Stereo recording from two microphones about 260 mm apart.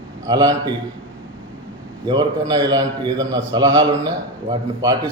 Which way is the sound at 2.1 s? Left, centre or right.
Centre.